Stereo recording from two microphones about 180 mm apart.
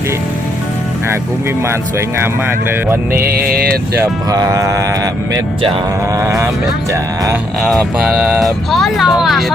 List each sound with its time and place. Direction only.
1.6 s speech: 15° right (ahead or behind)
3.2 s vehicle: 55° right (ahead or behind)
3.9 s speech: 15° right (ahead or behind)
7.6 s speech: centre (ahead or behind)